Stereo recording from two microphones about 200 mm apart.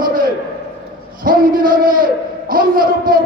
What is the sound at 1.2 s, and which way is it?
Speech, 45° right (ahead or behind).